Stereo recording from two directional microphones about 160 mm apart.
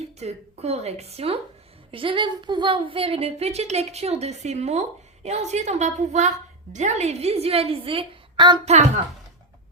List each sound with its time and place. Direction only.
0.0 s speech: 40° right (ahead or behind)